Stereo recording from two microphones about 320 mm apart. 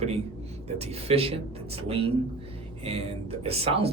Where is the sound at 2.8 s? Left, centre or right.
Centre.